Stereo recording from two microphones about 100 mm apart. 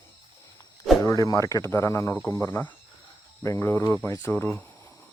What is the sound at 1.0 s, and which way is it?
Speech, 35° left (ahead or behind).